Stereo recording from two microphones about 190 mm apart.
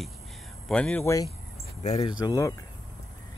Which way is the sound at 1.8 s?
35° left (ahead or behind).